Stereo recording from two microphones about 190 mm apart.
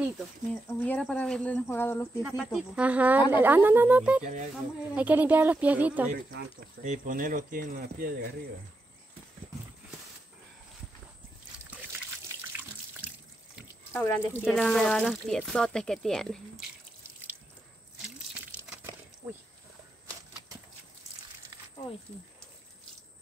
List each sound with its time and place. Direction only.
0.7 s speech: 10° left (ahead or behind)
2.2 s speech: 5° right (ahead or behind)
4.2 s speech: 40° right (ahead or behind)
4.9 s speech: 10° right (ahead or behind)
6.1 s speech: 60° right (ahead or behind)
6.8 s speech: 45° right (ahead or behind)
13.0 s sink: 10° right (ahead or behind)
13.9 s speech: 5° left (ahead or behind)